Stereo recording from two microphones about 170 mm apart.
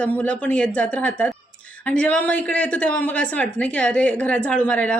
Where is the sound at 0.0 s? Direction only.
10° left (ahead or behind).